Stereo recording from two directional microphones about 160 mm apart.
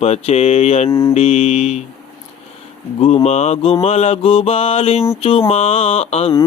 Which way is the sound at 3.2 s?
40° left (ahead or behind).